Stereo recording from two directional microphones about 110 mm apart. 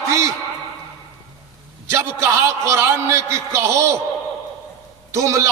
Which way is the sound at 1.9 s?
25° right (ahead or behind).